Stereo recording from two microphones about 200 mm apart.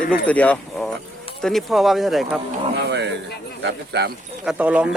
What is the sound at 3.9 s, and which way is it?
Speech, 55° right (ahead or behind).